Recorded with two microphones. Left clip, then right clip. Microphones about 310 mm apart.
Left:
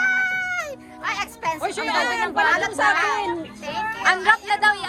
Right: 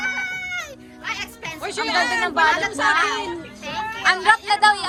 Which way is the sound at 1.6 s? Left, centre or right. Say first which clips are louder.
Right 3 dB; centre.